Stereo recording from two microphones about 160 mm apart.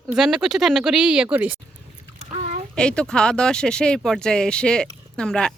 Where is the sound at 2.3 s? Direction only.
40° right (ahead or behind).